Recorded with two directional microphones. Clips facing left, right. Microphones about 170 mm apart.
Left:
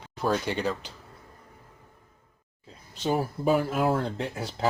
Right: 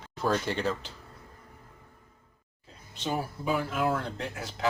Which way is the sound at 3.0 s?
40° left (ahead or behind).